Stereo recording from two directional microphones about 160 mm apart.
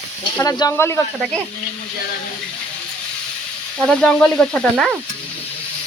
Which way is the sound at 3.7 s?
5° left (ahead or behind).